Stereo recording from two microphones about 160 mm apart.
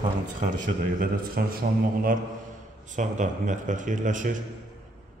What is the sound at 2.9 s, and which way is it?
Speech, 50° right (ahead or behind).